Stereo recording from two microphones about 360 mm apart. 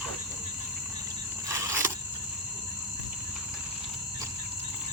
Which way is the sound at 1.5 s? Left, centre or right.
Centre.